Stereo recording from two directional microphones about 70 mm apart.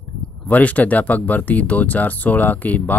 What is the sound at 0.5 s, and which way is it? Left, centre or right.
Speech, left.